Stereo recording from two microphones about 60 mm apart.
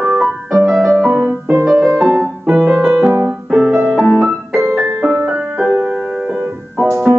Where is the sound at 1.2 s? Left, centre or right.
Right.